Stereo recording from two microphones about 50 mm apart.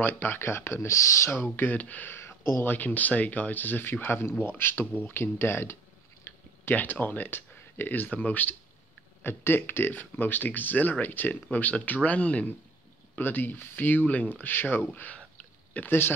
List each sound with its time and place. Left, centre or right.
0.0 s speech: left
0.7 s speech: left
1.3 s speech: left
2.0 s a sound: left
2.6 s speech: left
6.3 s a sound: left
6.7 s speech: left
9.2 s speech: left
13.2 s speech: left
15.8 s speech: left